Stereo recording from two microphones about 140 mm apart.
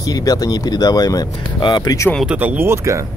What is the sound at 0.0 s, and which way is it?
Speech, 25° left (ahead or behind).